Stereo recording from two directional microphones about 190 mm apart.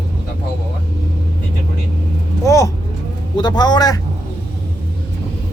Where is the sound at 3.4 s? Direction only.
20° left (ahead or behind).